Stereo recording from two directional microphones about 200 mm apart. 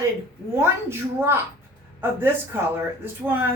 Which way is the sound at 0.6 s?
10° right (ahead or behind).